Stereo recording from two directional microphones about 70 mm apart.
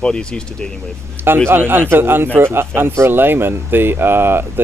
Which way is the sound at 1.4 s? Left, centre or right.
Right.